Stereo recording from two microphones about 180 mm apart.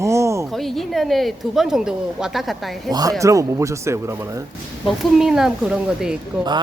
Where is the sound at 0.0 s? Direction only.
15° right (ahead or behind).